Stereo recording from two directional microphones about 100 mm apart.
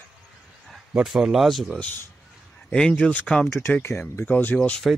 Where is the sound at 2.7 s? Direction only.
10° left (ahead or behind).